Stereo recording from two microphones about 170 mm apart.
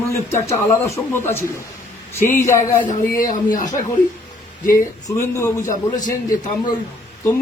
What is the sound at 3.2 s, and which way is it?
Speech, 50° left (ahead or behind).